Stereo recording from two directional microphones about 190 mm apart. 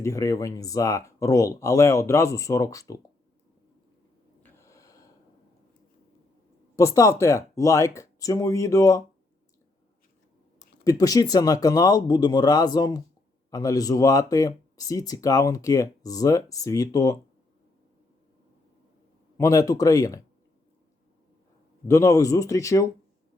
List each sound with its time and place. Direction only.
0.0 s speech: 15° left (ahead or behind)
4.4 s snort: 15° left (ahead or behind)
6.7 s speech: 15° left (ahead or behind)
10.8 s speech: 20° left (ahead or behind)
19.4 s speech: 20° left (ahead or behind)
21.8 s speech: 15° left (ahead or behind)